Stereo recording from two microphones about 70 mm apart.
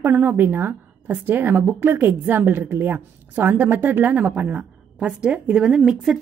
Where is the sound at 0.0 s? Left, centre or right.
Right.